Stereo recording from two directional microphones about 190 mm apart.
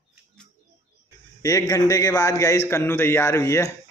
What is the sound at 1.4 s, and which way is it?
A man's voice, 20° left (ahead or behind).